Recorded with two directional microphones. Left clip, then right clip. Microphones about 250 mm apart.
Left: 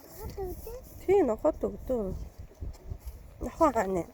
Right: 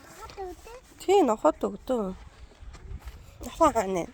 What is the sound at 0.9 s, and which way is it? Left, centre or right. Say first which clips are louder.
Speech: right 3 dB; centre.